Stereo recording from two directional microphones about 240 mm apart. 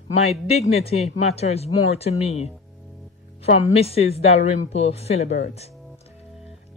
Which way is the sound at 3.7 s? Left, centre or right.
Left.